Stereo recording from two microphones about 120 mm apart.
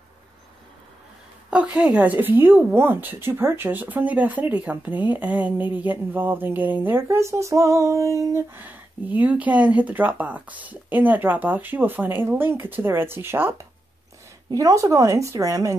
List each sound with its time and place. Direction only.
1.5 s speech: 10° right (ahead or behind); by 8.6 s 25° right (ahead or behind)
8.6 s speech: 15° right (ahead or behind)